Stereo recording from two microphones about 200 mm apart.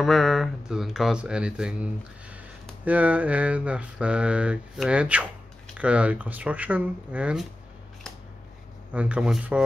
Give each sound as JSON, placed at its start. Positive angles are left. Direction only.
{"t": 0.0, "sound": "speech", "side_deg": 0}
{"t": 8.9, "sound": "speech", "side_deg": -5}